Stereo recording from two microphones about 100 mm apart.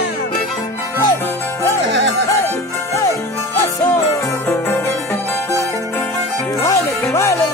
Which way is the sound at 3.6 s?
30° left (ahead or behind).